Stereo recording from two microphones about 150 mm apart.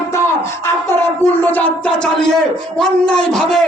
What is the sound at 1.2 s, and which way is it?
Speech, 10° left (ahead or behind).